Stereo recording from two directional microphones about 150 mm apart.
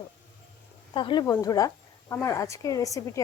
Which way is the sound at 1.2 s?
20° left (ahead or behind).